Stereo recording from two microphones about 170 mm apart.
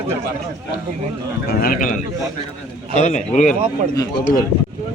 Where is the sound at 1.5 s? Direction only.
60° left (ahead or behind).